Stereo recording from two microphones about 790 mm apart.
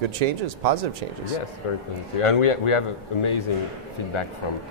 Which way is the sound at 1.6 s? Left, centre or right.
Left.